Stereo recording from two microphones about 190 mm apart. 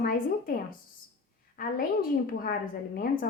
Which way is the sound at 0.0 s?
50° left (ahead or behind).